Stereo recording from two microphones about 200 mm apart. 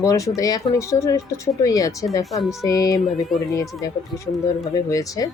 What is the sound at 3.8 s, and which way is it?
Speech, 20° left (ahead or behind).